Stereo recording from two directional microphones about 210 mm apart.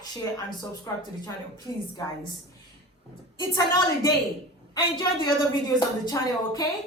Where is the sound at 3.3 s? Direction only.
20° left (ahead or behind).